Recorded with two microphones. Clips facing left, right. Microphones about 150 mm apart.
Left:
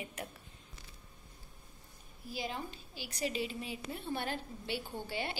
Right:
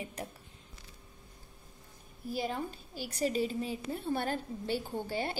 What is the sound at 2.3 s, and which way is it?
A woman's voice, 45° right (ahead or behind).